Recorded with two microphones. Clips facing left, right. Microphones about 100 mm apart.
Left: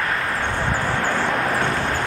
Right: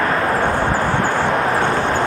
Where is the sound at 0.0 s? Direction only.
35° right (ahead or behind).